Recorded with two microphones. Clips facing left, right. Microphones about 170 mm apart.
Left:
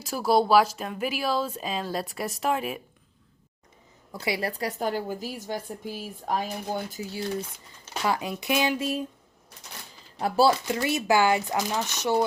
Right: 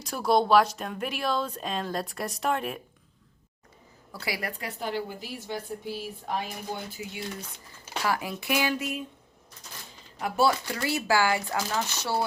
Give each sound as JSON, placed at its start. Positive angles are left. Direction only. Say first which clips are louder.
{"t": 0.0, "sound": "speech", "louder": "left 1 dB", "side_deg": 5}
{"t": 4.1, "sound": "a woman's voice", "louder": "left 5 dB", "side_deg": 20}
{"t": 8.0, "sound": "speech", "louder": "left 2 dB", "side_deg": 20}
{"t": 10.2, "sound": "speech", "louder": "left 3 dB", "side_deg": 30}